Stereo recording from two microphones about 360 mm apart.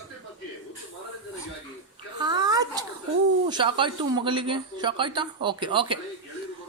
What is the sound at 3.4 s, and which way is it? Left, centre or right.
Speech, centre.